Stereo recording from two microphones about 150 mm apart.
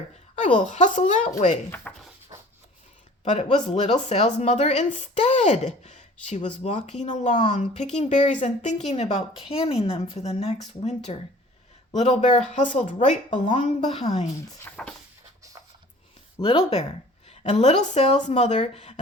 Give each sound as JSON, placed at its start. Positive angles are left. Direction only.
{"t": 0.3, "sound": "speech", "side_deg": 55}
{"t": 1.7, "sound": "speech", "side_deg": 10}
{"t": 2.3, "sound": "a sound", "side_deg": -20}
{"t": 3.3, "sound": "speech", "side_deg": 45}
{"t": 14.6, "sound": "speech", "side_deg": 5}
{"t": 16.4, "sound": "speech", "side_deg": 40}